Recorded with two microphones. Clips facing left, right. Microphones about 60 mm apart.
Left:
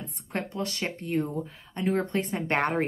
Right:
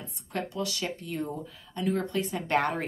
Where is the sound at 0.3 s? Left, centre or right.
Left.